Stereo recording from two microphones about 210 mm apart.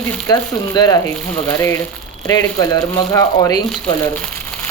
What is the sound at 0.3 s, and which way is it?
Speech, 20° left (ahead or behind).